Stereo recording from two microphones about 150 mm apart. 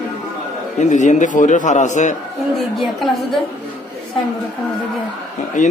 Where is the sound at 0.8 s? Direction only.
55° left (ahead or behind).